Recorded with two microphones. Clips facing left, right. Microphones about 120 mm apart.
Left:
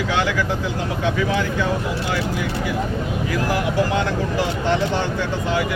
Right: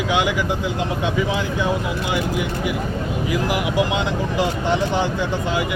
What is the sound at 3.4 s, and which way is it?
Speech, 15° right (ahead or behind).